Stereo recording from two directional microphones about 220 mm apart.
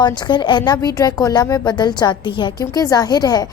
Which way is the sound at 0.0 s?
20° left (ahead or behind).